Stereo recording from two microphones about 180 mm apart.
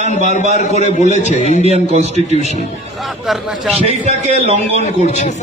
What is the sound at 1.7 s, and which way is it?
Speech, 35° right (ahead or behind).